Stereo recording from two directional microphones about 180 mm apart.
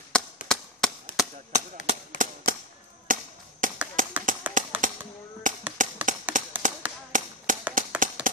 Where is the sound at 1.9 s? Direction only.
50° right (ahead or behind).